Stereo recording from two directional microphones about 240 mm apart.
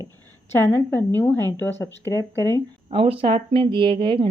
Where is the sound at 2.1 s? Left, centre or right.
Centre.